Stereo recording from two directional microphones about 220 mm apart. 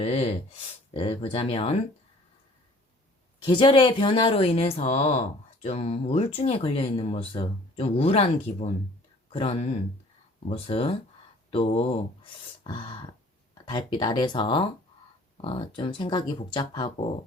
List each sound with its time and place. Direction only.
0.0 s speech: 30° left (ahead or behind)
3.4 s speech: 20° left (ahead or behind)